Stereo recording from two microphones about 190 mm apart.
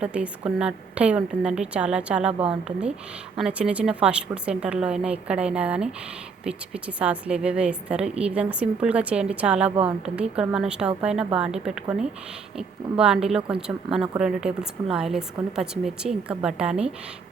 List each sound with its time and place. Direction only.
0.0 s speech: 5° right (ahead or behind)
3.3 s a woman's voice: 5° right (ahead or behind)